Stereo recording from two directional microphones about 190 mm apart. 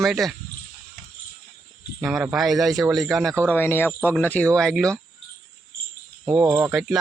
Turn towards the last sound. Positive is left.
turn(degrees=0)  # may be behind; listen again after turning